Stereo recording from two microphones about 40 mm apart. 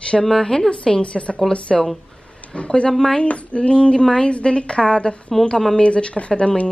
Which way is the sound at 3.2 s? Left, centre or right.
Left.